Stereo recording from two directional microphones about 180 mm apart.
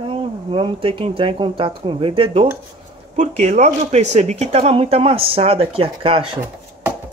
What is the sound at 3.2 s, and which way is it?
Speech, 40° right (ahead or behind).